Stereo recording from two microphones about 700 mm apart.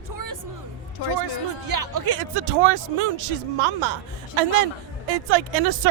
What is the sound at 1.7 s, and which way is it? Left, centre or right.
A man's voice, right.